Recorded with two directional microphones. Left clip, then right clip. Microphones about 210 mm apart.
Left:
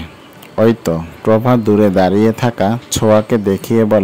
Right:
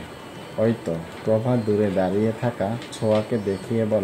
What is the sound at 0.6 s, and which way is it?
Speech, 50° left (ahead or behind).